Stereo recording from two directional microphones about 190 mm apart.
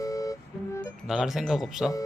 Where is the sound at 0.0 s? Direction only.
20° left (ahead or behind).